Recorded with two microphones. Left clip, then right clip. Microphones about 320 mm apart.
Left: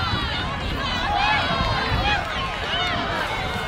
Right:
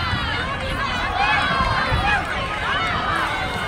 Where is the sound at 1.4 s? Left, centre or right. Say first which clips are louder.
Right 3 dB; centre.